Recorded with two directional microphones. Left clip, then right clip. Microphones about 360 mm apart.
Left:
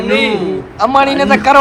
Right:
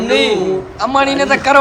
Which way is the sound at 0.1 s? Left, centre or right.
Right.